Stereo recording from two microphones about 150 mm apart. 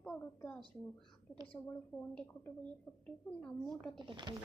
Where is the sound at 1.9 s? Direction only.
10° left (ahead or behind).